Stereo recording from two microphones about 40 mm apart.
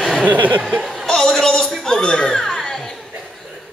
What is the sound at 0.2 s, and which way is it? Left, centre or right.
Speech, right.